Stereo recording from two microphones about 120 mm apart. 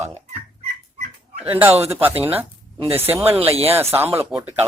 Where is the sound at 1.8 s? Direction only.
20° right (ahead or behind).